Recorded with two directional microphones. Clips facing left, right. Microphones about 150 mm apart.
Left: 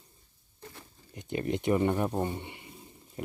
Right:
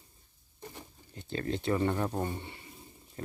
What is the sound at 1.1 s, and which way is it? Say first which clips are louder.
Speech: left 3 dB; 15° left (ahead or behind).